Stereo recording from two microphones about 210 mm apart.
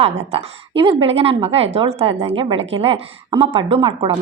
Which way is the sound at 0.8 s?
25° right (ahead or behind).